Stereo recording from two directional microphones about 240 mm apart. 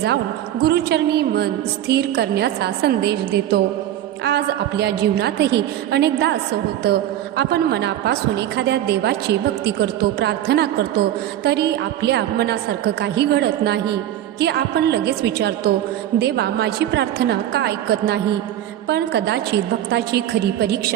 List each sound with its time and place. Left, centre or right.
0.6 s a woman's voice: right